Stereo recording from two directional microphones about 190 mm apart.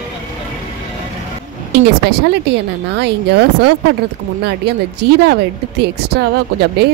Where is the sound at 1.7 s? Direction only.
60° right (ahead or behind).